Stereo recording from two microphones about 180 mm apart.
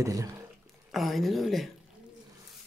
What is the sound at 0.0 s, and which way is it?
Speech, 15° right (ahead or behind).